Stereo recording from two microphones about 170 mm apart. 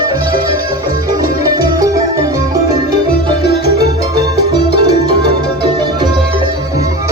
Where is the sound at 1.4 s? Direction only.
20° right (ahead or behind).